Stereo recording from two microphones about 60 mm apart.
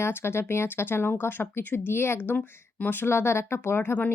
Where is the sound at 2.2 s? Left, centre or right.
Left.